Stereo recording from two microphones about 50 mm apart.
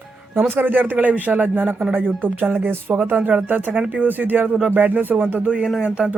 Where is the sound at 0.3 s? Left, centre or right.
Right.